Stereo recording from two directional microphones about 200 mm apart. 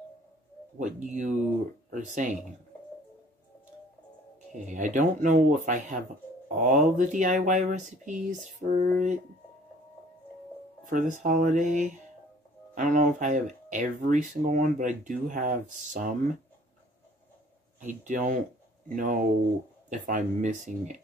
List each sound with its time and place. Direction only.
0.7 s speech: 35° right (ahead or behind)
4.6 s speech: 40° right (ahead or behind)
10.9 s speech: 40° right (ahead or behind)
17.7 s speech: 40° right (ahead or behind)